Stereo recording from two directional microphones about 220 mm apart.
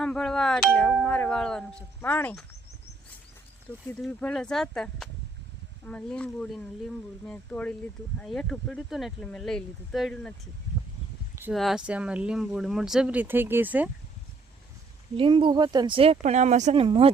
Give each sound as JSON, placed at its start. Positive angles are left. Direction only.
{"t": 0.0, "sound": "speech", "side_deg": 5}
{"t": 4.0, "sound": "speech", "side_deg": 5}
{"t": 11.5, "sound": "speech", "side_deg": 0}
{"t": 15.2, "sound": "speech", "side_deg": -20}